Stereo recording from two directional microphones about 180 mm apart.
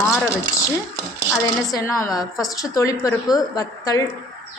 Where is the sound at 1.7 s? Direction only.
15° left (ahead or behind).